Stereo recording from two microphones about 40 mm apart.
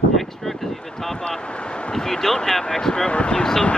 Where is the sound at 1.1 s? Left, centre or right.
Centre.